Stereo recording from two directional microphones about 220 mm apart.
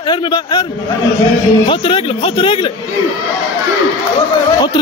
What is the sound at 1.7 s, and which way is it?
Speech, 25° left (ahead or behind).